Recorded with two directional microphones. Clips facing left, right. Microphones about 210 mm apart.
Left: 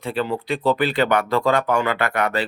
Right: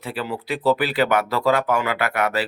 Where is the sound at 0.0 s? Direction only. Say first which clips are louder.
Left 4 dB; 5° right (ahead or behind).